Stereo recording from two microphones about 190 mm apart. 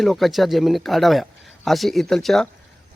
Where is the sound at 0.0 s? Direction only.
Centre (ahead or behind).